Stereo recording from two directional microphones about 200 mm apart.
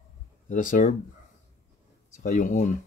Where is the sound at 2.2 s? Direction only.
40° left (ahead or behind).